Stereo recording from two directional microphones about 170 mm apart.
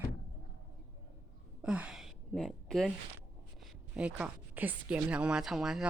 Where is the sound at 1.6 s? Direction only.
5° right (ahead or behind).